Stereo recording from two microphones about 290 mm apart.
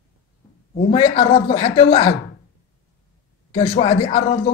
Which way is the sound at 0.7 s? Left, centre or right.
Centre.